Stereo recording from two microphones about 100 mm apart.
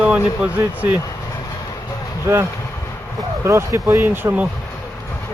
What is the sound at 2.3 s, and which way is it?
Speech, 30° right (ahead or behind).